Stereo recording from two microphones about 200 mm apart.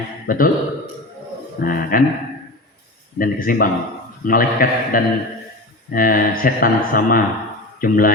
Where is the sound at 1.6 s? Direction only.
45° left (ahead or behind).